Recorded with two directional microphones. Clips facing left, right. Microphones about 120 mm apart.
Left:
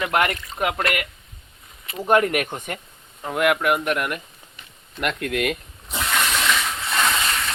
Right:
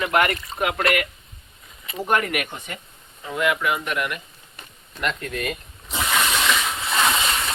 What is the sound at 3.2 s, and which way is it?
Speech, 60° left (ahead or behind).